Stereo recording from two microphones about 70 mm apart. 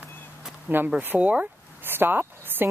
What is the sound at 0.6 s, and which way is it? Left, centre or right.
Speech, right.